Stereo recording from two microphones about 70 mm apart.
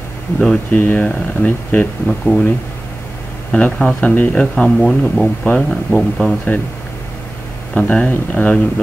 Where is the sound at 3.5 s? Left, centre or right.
Centre.